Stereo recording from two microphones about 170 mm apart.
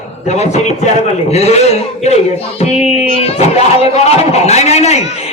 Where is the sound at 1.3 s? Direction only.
40° left (ahead or behind).